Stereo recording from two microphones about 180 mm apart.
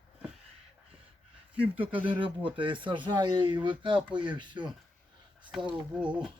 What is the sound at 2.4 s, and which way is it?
Speech, 25° right (ahead or behind).